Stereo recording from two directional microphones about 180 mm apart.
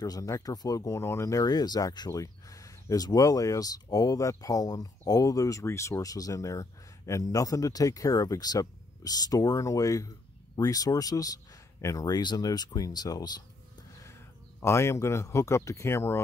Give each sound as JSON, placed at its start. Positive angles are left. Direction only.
{"t": 0.0, "sound": "speech", "side_deg": 20}
{"t": 14.6, "sound": "speech", "side_deg": 15}